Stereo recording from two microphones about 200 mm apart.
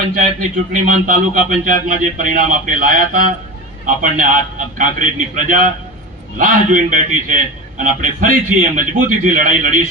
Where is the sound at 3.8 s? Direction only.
40° right (ahead or behind).